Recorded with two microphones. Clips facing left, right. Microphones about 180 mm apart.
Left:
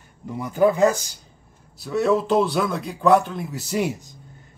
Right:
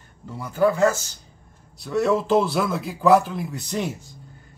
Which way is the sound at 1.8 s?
Centre (ahead or behind).